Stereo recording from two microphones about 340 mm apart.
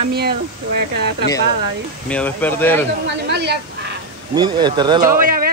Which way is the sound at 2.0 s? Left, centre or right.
Centre.